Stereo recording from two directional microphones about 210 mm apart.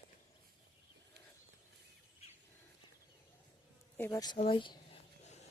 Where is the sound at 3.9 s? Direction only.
10° left (ahead or behind).